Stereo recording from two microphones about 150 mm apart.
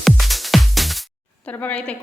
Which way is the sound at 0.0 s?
Centre (ahead or behind).